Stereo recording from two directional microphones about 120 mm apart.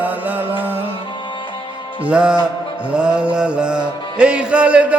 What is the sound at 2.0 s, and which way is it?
Music, 10° right (ahead or behind).